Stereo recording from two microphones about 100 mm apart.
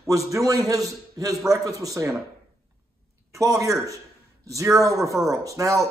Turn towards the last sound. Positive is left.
turn(degrees=-35)  # may be behind; listen again after turning